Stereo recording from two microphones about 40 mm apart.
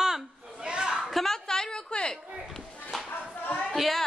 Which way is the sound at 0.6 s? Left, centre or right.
Right.